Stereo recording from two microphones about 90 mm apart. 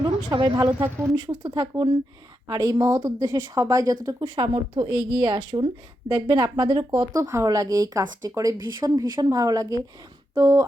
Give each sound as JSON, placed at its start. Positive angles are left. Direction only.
{"t": 0.3, "sound": "speech", "side_deg": -55}
{"t": 4.2, "sound": "speech", "side_deg": -60}
{"t": 7.0, "sound": "speech", "side_deg": -40}
{"t": 8.5, "sound": "speech", "side_deg": -50}